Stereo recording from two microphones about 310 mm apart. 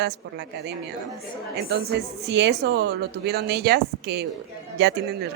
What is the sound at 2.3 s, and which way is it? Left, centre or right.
Speech, right.